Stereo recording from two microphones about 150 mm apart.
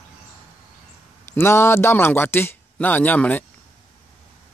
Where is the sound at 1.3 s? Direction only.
15° left (ahead or behind).